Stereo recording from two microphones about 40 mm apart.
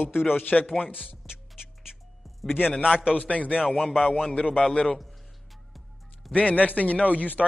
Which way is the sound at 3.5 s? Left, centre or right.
Centre.